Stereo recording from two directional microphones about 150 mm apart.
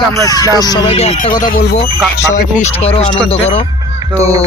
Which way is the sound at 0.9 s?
40° left (ahead or behind).